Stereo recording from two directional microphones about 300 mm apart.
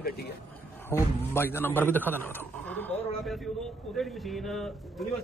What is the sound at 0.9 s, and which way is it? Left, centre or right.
Speech, centre.